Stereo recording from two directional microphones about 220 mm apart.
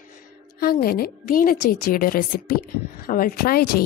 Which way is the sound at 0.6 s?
45° left (ahead or behind).